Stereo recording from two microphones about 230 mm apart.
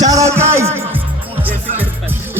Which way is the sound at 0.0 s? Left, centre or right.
Centre.